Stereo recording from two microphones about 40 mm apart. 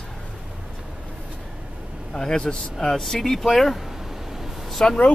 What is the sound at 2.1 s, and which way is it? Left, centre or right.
Speech, centre.